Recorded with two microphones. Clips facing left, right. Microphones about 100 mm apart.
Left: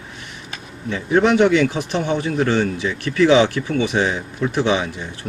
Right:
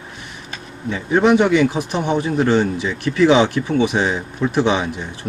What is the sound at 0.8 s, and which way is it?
A man's voice, 20° right (ahead or behind).